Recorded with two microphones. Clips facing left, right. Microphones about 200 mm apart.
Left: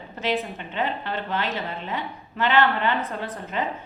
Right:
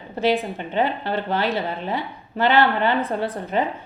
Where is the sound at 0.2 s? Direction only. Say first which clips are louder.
Right 6 dB; 35° right (ahead or behind).